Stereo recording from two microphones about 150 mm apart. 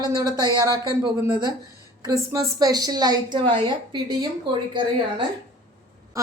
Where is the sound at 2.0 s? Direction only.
20° right (ahead or behind).